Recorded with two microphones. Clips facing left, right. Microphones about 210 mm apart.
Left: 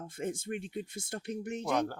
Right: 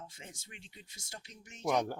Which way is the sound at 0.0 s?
55° left (ahead or behind).